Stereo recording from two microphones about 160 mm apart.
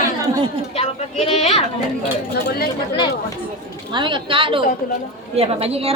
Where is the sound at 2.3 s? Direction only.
80° left.